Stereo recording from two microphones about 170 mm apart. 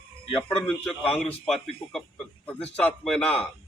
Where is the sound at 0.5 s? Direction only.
5° left (ahead or behind).